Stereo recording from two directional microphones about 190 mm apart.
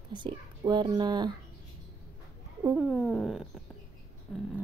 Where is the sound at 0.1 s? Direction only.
25° right (ahead or behind).